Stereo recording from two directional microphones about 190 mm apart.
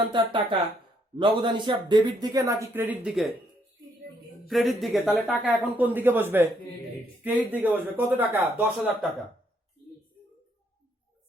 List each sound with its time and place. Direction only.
0.1 s speech: 25° right (ahead or behind); by 3.3 s 5° right (ahead or behind)
4.4 s speech: centre (ahead or behind)
5.7 s speech: 10° right (ahead or behind)